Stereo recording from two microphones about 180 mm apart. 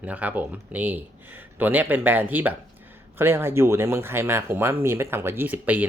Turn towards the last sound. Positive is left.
turn(degrees=-10)  # may be behind; listen again after turning